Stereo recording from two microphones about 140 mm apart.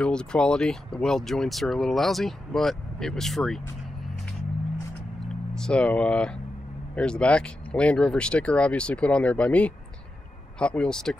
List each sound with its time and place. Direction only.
0.0 s speech: 5° left (ahead or behind)
5.5 s speech: 5° left (ahead or behind)